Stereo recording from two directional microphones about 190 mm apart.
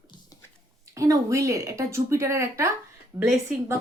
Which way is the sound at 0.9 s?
15° right (ahead or behind).